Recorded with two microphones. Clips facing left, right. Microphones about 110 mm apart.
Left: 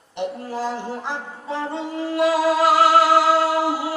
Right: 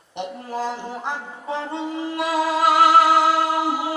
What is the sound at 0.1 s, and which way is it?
Music, 15° right (ahead or behind).